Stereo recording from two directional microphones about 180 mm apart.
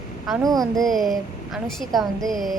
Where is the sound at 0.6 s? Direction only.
Centre (ahead or behind).